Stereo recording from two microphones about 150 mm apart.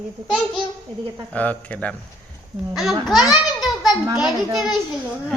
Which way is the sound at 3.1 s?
Centre (ahead or behind).